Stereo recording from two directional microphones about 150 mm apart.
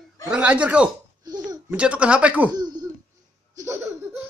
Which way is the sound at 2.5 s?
25° right (ahead or behind).